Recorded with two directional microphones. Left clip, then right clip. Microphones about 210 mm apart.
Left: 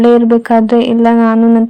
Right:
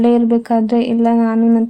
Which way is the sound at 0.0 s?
20° left (ahead or behind).